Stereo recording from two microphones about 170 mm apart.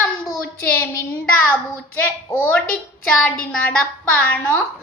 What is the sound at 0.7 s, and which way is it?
Speech, 15° left (ahead or behind).